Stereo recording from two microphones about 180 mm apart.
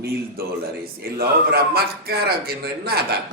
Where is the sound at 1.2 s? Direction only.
60° right (ahead or behind).